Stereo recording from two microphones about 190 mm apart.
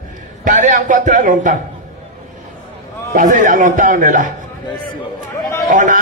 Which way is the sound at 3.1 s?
45° right (ahead or behind).